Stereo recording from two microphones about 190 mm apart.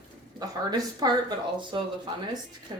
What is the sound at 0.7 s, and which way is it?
A woman's voice, 20° right (ahead or behind).